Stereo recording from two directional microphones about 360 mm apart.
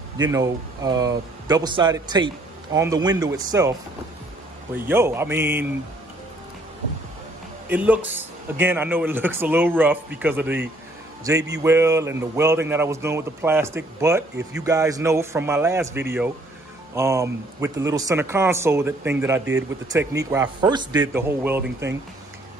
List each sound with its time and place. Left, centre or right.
0.2 s speech: centre
4.7 s speech: centre
7.6 s a man's voice: centre